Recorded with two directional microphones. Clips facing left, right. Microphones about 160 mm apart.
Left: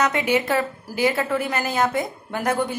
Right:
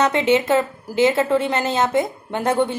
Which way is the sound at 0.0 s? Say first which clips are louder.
Right 4 dB; 25° right (ahead or behind).